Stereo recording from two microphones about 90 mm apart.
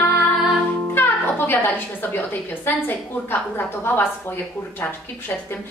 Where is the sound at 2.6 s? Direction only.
20° left (ahead or behind).